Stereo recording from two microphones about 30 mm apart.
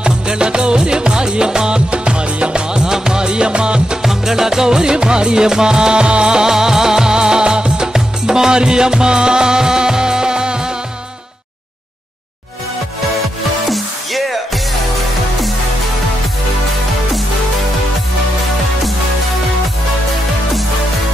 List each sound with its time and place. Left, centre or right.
0.0 s music: right
4.0 s music: centre; by 6.3 s right
6.3 s music: centre
13.7 s music: centre